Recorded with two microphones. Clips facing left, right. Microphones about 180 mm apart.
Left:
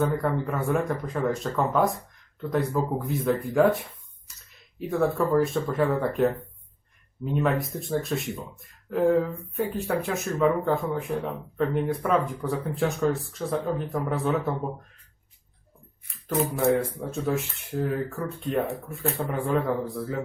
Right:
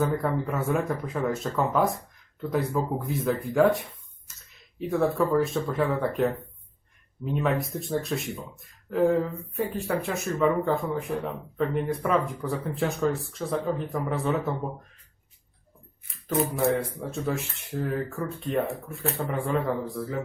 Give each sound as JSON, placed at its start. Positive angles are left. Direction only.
{"t": 0.0, "sound": "speech", "side_deg": 0}
{"t": 7.3, "sound": "speech", "side_deg": 0}
{"t": 16.0, "sound": "speech", "side_deg": 0}